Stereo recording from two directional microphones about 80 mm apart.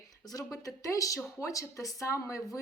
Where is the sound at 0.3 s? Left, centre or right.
Left.